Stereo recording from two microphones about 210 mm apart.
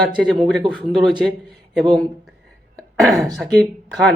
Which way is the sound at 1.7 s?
5° left (ahead or behind).